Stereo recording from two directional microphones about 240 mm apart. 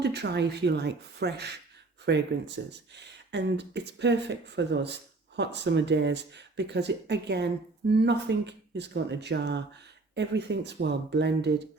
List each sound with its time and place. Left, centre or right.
0.0 s speech: right